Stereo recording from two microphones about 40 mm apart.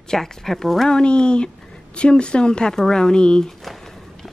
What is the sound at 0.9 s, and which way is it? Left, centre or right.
A woman's voice, left.